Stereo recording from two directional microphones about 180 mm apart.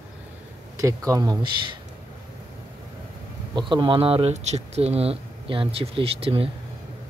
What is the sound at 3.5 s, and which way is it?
Speech, 25° right (ahead or behind).